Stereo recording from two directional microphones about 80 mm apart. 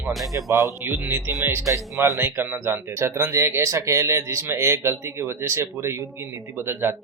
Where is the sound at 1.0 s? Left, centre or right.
Right.